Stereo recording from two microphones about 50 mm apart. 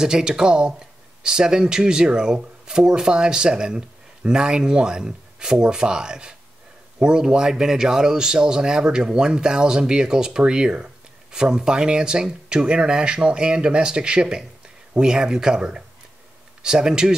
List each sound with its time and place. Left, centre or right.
0.0 s speech: centre